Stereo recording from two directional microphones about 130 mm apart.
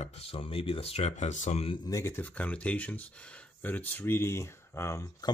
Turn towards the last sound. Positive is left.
turn(degrees=20)  # may be behind; listen again after turning